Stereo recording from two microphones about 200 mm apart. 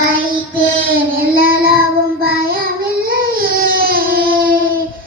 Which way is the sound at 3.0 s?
45° right (ahead or behind).